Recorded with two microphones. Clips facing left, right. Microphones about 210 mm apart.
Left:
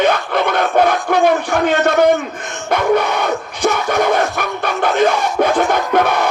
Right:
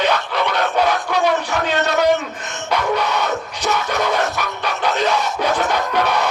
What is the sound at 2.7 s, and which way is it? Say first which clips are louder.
Music: left 5 dB; 50° left (ahead or behind).